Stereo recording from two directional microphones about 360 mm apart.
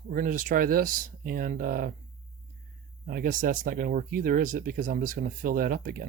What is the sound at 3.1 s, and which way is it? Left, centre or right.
Speech, right.